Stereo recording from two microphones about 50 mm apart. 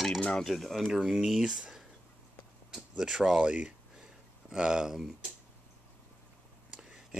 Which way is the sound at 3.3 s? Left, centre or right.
Right.